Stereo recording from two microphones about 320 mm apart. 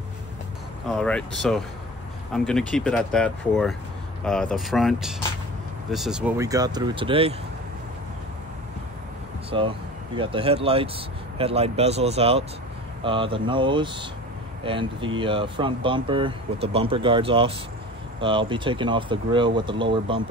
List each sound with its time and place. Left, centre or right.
0.8 s speech: centre
9.5 s speech: centre